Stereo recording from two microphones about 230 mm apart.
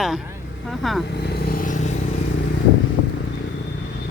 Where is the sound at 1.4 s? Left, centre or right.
Left.